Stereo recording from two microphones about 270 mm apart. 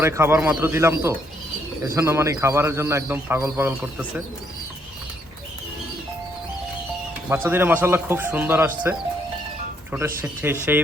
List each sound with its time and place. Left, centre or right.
0.0 s a man's voice: centre
7.3 s a man's voice: centre
9.9 s a man's voice: centre